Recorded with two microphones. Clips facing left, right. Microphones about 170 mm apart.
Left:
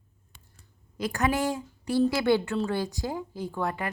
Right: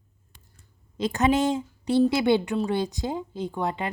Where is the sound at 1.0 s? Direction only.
20° right (ahead or behind).